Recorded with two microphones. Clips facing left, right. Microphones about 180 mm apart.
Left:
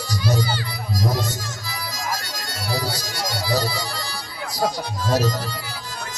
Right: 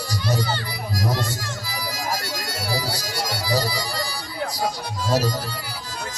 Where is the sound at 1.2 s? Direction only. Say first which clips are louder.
Even; 10° right (ahead or behind).